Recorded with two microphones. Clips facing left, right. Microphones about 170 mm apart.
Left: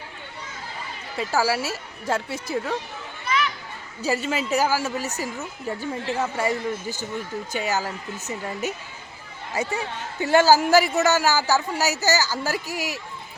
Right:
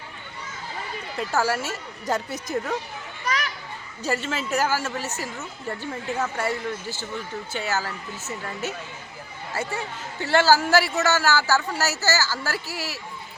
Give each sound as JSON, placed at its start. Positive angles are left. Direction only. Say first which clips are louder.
{"t": 1.1, "sound": "a woman's voice", "louder": "left 1 dB", "side_deg": 5}
{"t": 3.2, "sound": "children playing", "louder": "left 3 dB", "side_deg": -40}
{"t": 4.0, "sound": "speech", "louder": "left 2 dB", "side_deg": 10}